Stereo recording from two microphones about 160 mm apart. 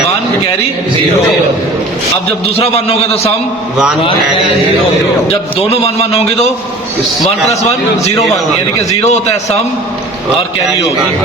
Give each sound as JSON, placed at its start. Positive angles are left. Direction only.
{"t": 2.6, "sound": "a man's voice", "side_deg": 40}
{"t": 5.5, "sound": "a man's voice", "side_deg": 40}
{"t": 7.6, "sound": "a man's voice", "side_deg": 45}